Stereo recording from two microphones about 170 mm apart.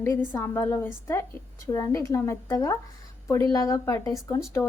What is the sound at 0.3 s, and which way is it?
A woman's voice, 15° left (ahead or behind).